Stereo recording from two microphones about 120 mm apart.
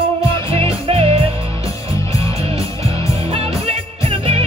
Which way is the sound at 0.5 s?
50° right (ahead or behind).